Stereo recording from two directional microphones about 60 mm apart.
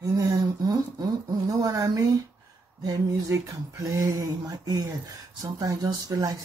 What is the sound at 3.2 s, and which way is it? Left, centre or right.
A woman's voice, right.